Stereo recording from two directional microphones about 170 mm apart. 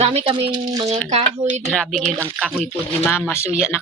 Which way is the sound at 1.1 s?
40° right (ahead or behind).